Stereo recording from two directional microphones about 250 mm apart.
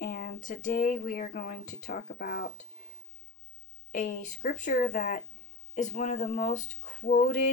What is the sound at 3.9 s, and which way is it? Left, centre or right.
Speech, left.